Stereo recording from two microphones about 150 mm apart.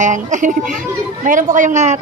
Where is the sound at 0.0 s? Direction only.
55° right (ahead or behind).